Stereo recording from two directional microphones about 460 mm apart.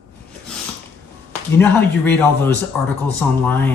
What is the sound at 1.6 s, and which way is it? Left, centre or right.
Speech, centre.